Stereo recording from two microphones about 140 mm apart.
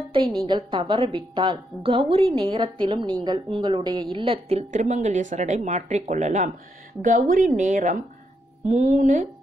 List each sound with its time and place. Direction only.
0.5 s a woman's voice: 35° right (ahead or behind); by 6.5 s 60° right (ahead or behind)
7.0 s a woman's voice: 70° right (ahead or behind)